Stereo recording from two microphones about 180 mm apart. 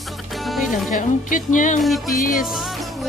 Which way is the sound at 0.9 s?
45° left (ahead or behind).